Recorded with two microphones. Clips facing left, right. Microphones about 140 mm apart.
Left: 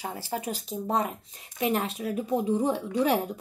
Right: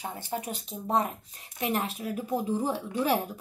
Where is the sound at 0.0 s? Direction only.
35° left (ahead or behind).